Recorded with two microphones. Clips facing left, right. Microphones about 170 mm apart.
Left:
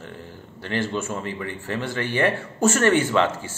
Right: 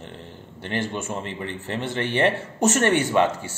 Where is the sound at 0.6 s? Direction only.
20° right (ahead or behind).